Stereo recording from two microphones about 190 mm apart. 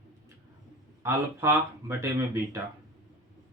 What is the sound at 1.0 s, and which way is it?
Speech, 15° right (ahead or behind).